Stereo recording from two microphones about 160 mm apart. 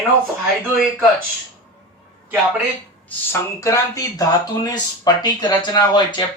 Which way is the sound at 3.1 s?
20° left (ahead or behind).